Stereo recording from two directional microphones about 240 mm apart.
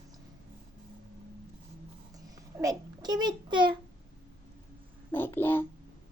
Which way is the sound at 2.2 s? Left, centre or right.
Centre.